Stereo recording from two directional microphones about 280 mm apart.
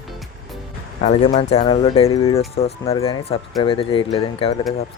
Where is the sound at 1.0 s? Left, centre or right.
Left.